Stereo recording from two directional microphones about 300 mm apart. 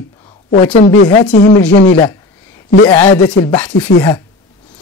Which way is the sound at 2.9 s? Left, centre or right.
Centre.